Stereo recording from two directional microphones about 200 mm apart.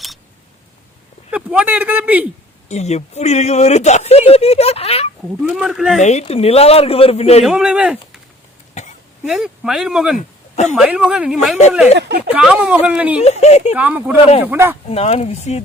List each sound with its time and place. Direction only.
1.3 s speech: 5° right (ahead or behind)
2.6 s speech: 35° left (ahead or behind)
5.5 s speech: centre (ahead or behind)
6.0 s speech: 35° left (ahead or behind)
7.4 s speech: 5° right (ahead or behind)
8.8 s throat clearing: 35° left (ahead or behind)
9.2 s speech: 5° right (ahead or behind)
10.2 s a sound: 35° left (ahead or behind)
10.8 s speech: 5° right (ahead or behind)
11.9 s speech: 60° right (ahead or behind)
12.3 s speech: 5° right (ahead or behind)
13.2 s speech: 30° left (ahead or behind)
13.7 s speech: 10° right (ahead or behind)
14.8 s speech: 30° left (ahead or behind)